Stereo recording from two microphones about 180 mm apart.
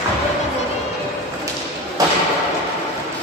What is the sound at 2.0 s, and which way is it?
Thump, 20° right (ahead or behind).